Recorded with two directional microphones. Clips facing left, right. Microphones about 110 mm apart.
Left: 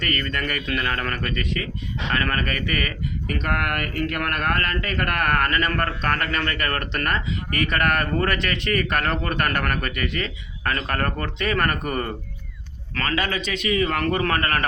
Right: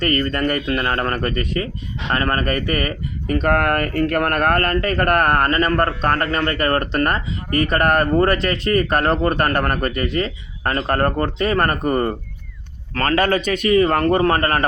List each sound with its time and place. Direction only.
0.0 s a man's voice: 35° right (ahead or behind)
12.9 s a man's voice: 45° right (ahead or behind)